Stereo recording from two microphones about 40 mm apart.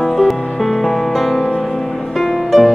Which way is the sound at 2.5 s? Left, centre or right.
Centre.